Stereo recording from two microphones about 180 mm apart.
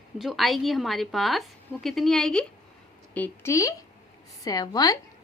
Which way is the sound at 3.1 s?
10° left (ahead or behind).